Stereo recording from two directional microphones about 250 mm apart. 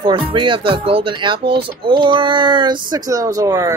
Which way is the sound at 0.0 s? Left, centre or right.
Centre.